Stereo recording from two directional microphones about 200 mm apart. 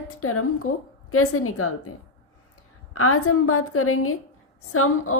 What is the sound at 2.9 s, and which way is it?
Speech, 90° left.